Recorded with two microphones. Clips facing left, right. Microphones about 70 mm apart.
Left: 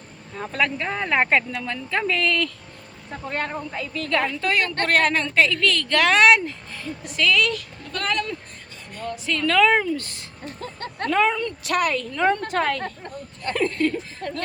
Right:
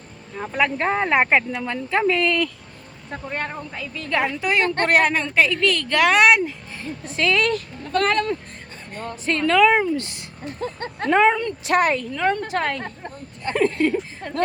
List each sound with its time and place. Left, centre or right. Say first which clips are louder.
0.3 s a woman's voice: right 2 dB; centre
0.8 s speech: right 3 dB; right
3.2 s a woman's voice: left 2 dB; centre
6.7 s speech: right 1 dB; right
9.5 s speech: right 2 dB; centre; by 11.9 s right
12.1 s a woman's voice: left 1 dB; centre